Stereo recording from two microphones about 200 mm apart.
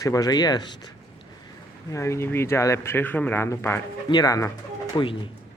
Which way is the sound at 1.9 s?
15° left (ahead or behind).